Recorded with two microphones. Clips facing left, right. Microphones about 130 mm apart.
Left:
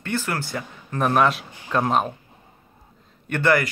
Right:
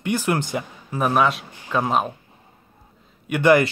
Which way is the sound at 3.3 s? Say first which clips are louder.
Right 4 dB; 15° right (ahead or behind).